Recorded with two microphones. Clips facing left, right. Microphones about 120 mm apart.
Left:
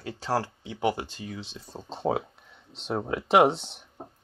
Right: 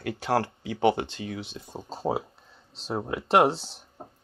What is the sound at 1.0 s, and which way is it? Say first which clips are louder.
Speech: right 3 dB; 70° right (ahead or behind).